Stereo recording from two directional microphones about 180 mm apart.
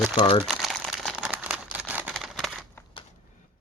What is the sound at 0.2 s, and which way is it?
Speech, 35° left (ahead or behind).